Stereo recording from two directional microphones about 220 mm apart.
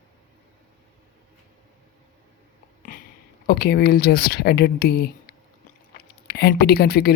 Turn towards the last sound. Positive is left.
turn(degrees=45)  # may be behind; listen again after turning